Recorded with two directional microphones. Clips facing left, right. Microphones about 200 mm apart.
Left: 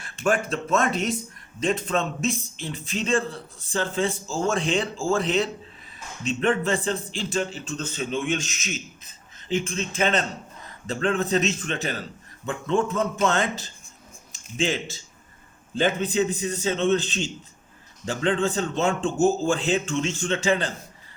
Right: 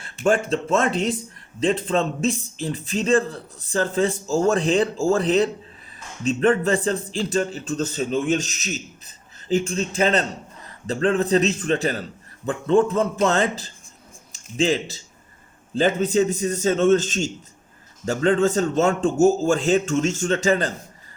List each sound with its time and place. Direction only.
0.0 s a man's voice: 30° right (ahead or behind)